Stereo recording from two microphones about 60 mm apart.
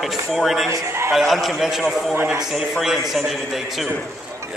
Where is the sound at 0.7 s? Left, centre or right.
Right.